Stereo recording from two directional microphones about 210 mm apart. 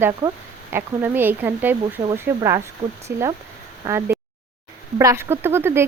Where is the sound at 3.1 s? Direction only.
50° right (ahead or behind).